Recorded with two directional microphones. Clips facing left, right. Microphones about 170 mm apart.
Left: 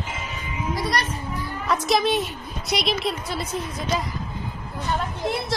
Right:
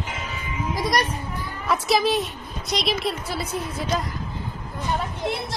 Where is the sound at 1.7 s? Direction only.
5° right (ahead or behind).